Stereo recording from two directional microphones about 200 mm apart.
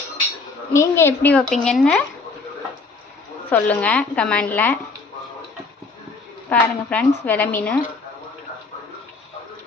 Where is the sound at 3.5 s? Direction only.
5° left (ahead or behind).